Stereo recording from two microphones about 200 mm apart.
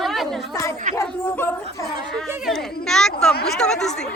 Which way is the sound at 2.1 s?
Centre (ahead or behind).